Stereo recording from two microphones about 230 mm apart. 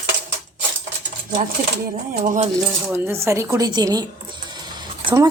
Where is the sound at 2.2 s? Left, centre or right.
Right.